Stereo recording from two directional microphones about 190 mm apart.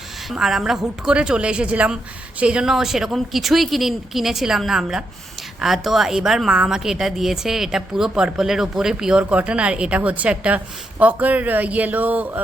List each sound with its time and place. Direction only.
0.3 s a woman's voice: centre (ahead or behind)